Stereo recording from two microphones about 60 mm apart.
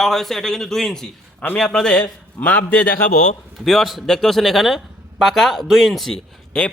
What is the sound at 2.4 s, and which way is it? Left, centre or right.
Speech, left.